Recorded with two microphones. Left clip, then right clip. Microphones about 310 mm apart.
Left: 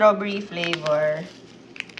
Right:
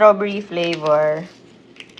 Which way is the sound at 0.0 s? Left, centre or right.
Centre.